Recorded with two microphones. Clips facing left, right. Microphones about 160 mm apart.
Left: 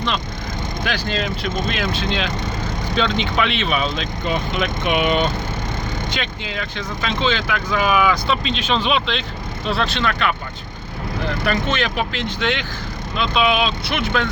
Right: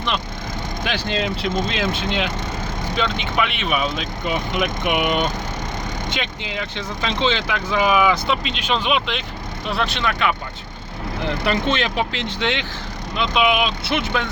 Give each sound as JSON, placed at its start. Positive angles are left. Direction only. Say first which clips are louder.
{"t": 0.9, "sound": "speech", "louder": "right 1 dB", "side_deg": -20}
{"t": 2.9, "sound": "speech", "louder": "left 3 dB", "side_deg": -5}